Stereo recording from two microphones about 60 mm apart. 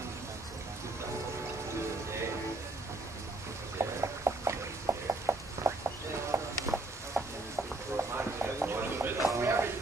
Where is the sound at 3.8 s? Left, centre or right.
Right.